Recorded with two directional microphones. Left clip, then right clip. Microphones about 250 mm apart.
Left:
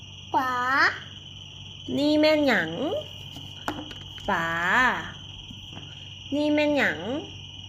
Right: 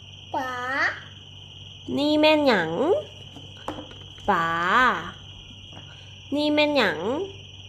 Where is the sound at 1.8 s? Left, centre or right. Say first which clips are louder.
Right 2 dB; centre.